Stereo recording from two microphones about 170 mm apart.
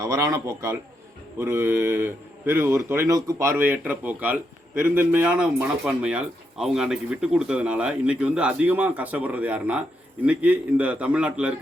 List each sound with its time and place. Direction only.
0.0 s speech: 20° right (ahead or behind)